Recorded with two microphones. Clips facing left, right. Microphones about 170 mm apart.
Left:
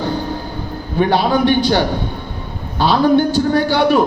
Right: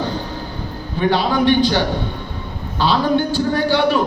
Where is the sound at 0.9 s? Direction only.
45° left (ahead or behind).